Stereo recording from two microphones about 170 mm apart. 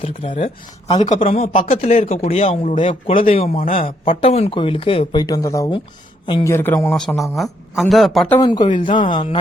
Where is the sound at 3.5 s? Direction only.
55° left (ahead or behind).